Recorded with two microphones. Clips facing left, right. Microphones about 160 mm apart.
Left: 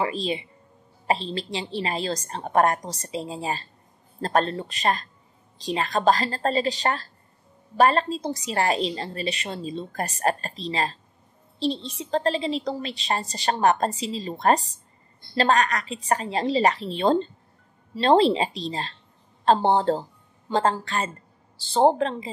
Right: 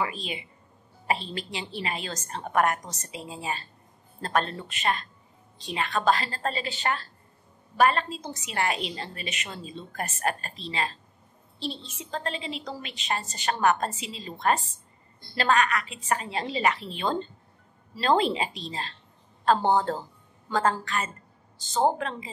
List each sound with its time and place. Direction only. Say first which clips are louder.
0.0 s a woman's voice: left 5 dB; 35° left (ahead or behind)